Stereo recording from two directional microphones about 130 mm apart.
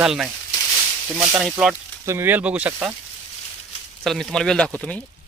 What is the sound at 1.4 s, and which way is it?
Speech, 5° right (ahead or behind).